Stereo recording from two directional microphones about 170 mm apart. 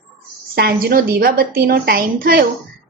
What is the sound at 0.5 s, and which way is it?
Speech, 65° right (ahead or behind).